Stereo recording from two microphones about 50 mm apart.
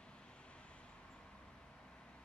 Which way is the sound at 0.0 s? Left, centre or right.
Left.